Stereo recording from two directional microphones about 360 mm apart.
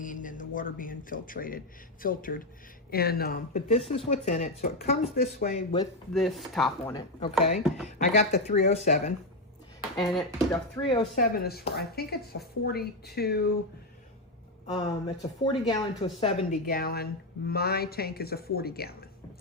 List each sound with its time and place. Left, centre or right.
0.0 s speech: left
6.1 s speech: centre
10.1 s speech: centre
10.8 s speech: centre
14.7 s speech: centre